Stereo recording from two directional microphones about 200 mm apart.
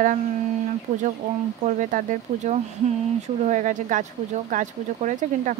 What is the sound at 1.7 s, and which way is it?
Speech, 40° right (ahead or behind).